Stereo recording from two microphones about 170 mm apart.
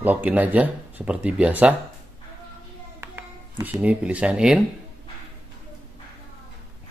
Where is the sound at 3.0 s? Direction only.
10° right (ahead or behind).